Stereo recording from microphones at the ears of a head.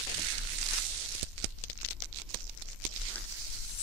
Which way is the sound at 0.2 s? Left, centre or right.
Right.